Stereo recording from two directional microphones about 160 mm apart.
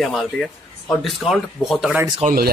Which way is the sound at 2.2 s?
40° right (ahead or behind).